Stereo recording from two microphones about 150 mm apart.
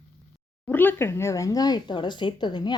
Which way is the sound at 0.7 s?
10° left (ahead or behind).